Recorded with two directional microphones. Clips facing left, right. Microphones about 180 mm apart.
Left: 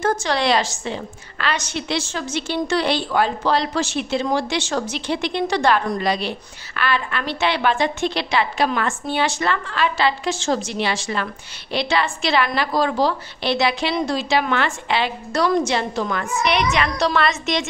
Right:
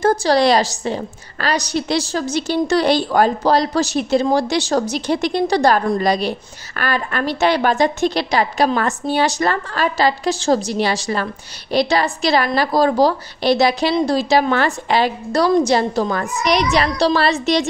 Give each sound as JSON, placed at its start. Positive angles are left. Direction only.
{"t": 0.0, "sound": "a woman's voice", "side_deg": -35}